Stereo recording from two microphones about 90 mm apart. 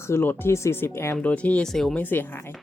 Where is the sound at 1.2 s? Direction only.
15° left (ahead or behind).